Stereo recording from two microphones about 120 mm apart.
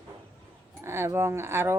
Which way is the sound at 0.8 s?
20° right (ahead or behind).